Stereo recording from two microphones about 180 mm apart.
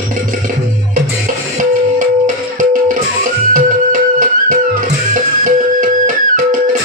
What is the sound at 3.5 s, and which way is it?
Music, 45° right (ahead or behind).